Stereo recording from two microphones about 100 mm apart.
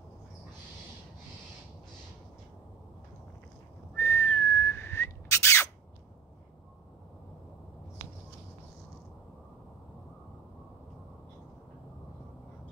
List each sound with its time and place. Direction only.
4.0 s whistling: 25° left (ahead or behind)